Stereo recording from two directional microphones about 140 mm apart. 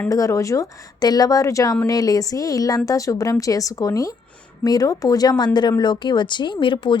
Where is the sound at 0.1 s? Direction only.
25° left (ahead or behind).